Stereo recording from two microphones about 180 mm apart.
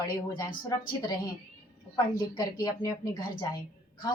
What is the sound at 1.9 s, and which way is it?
A woman's voice, 20° left (ahead or behind).